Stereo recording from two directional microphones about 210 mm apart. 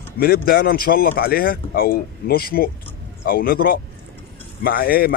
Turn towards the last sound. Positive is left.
turn(degrees=45)  # may be behind; listen again after turning